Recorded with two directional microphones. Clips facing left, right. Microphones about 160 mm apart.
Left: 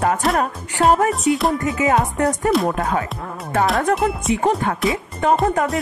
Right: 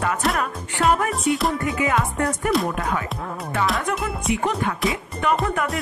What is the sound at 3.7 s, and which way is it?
Speech, 50° left (ahead or behind).